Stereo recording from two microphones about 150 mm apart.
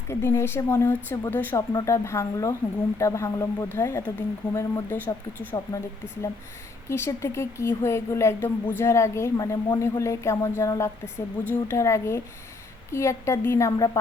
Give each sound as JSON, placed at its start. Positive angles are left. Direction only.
{"t": 0.1, "sound": "a woman's voice", "side_deg": 15}
{"t": 6.8, "sound": "a woman's voice", "side_deg": 15}